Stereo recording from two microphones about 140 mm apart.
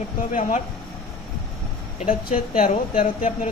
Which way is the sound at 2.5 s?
65° left (ahead or behind).